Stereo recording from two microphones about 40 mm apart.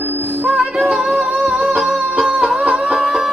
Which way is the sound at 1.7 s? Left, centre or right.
Centre.